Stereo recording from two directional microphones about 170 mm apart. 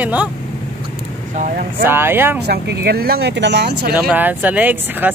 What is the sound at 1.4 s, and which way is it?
Speech, 50° right (ahead or behind).